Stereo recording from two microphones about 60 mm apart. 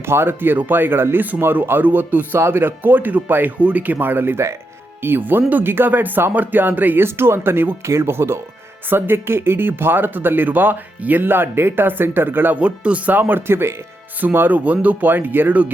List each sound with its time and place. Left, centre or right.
0.0 s speech: right
12.5 s speech: centre
13.1 s speech: right
14.3 s speech: right